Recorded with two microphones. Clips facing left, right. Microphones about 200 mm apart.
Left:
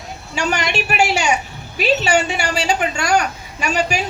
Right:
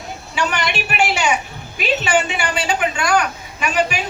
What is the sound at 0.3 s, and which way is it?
A man's voice, 45° left (ahead or behind).